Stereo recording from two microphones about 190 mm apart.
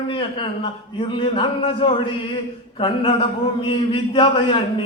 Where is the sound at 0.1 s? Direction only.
25° left (ahead or behind).